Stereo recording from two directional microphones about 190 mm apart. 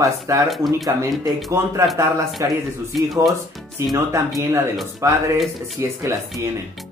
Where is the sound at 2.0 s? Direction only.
15° right (ahead or behind).